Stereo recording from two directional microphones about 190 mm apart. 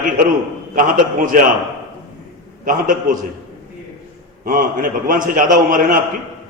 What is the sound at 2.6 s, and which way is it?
Speech, 45° right (ahead or behind).